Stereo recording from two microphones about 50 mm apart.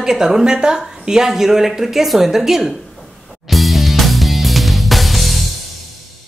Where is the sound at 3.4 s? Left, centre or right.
Centre.